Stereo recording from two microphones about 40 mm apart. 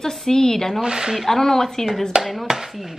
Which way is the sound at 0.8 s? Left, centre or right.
Centre.